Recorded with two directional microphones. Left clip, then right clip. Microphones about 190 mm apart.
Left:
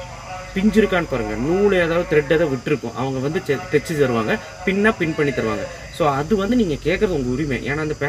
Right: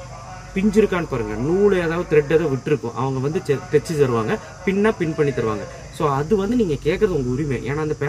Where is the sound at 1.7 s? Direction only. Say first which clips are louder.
Left 1 dB; 25° right (ahead or behind).